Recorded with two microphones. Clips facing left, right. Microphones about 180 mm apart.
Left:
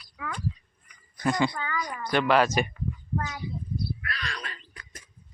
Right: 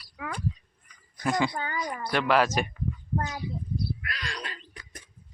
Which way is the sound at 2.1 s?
Centre (ahead or behind).